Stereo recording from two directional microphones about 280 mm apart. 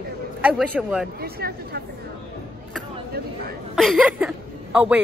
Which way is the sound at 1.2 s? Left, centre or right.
Right.